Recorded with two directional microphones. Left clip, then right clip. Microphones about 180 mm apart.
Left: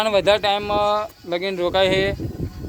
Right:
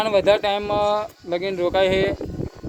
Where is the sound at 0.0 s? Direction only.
Centre (ahead or behind).